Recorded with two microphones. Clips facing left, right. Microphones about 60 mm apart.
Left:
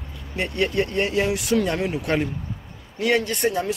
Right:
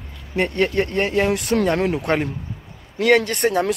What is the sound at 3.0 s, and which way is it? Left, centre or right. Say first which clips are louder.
Speech: right 5 dB; right.